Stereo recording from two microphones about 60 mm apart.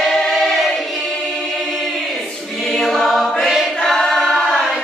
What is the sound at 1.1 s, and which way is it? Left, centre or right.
Choir, centre.